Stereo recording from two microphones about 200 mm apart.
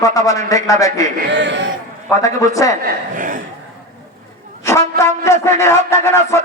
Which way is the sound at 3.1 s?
40° right (ahead or behind).